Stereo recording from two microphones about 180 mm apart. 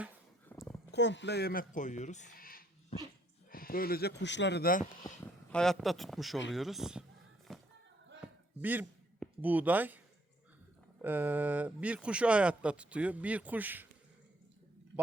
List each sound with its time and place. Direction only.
0.5 s a sound: 10° left (ahead or behind)
0.9 s speech: 75° left (ahead or behind); by 4.9 s 50° left (ahead or behind)
5.5 s a man's voice: 5° left (ahead or behind)
7.5 s a sound: centre (ahead or behind)
8.6 s speech: 10° right (ahead or behind)
11.0 s speech: 10° right (ahead or behind)